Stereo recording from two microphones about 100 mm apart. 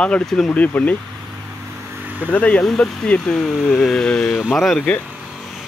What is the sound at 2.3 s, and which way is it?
Speech, 15° left (ahead or behind).